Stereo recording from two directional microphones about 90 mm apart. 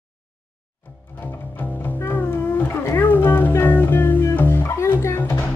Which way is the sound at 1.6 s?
20° left (ahead or behind).